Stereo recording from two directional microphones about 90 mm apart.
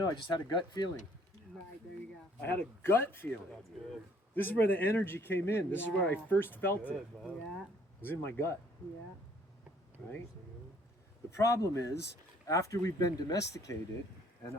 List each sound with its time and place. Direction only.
0.0 s speech: 50° left (ahead or behind)
2.4 s speech: 25° left (ahead or behind)
4.4 s speech: 20° left (ahead or behind)
8.0 s speech: 25° left (ahead or behind)
11.3 s speech: 35° left (ahead or behind)